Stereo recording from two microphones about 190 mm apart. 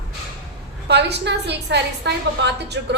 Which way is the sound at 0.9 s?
60° right (ahead or behind).